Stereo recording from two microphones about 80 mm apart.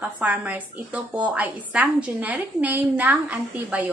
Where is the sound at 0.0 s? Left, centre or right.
Centre.